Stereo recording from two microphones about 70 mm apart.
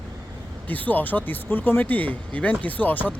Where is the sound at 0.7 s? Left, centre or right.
Left.